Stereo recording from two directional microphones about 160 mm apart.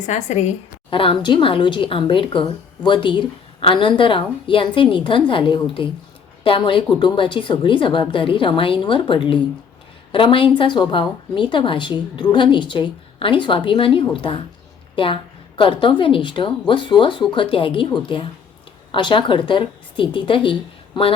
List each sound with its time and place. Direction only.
0.0 s a woman's voice: 45° left (ahead or behind)
0.9 s a woman's voice: 35° left (ahead or behind)